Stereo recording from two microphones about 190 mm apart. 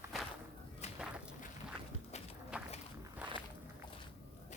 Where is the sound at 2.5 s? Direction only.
5° right (ahead or behind).